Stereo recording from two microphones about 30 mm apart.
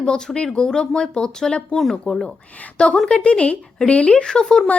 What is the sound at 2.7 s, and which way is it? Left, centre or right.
Speech, left.